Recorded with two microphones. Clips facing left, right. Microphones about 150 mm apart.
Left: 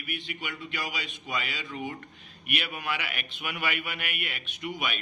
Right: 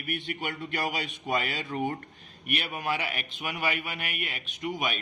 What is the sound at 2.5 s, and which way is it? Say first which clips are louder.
A man's voice: right 2 dB; 40° right (ahead or behind).